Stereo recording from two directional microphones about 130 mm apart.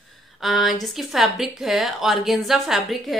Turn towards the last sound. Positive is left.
turn(degrees=0)  # may be behind; listen again after turning